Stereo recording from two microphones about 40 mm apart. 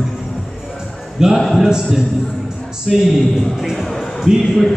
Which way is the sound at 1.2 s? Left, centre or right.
Centre.